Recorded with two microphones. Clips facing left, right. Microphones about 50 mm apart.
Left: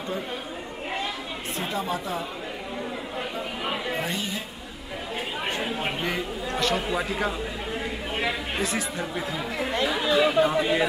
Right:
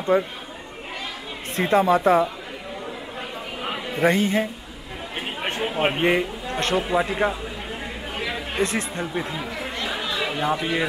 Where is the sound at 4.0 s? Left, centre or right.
Right.